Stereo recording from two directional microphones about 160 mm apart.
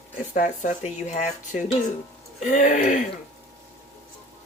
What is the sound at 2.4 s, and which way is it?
Speech, 55° left (ahead or behind).